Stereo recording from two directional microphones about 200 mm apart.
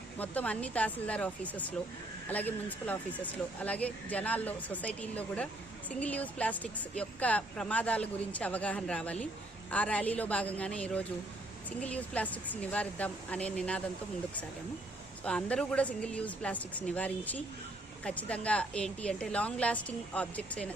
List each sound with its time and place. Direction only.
0.2 s speech: 5° left (ahead or behind)
15.2 s a woman's voice: 5° left (ahead or behind)